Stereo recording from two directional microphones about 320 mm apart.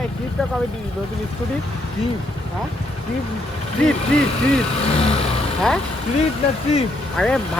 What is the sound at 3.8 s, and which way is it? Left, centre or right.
Speech, centre.